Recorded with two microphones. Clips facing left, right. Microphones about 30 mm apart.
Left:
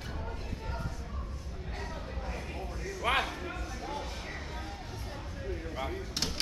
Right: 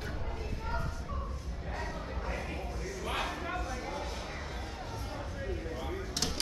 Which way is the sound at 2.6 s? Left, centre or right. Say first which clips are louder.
Even; centre.